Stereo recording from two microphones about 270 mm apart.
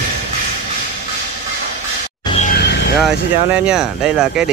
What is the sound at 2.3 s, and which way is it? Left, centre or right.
Music, left.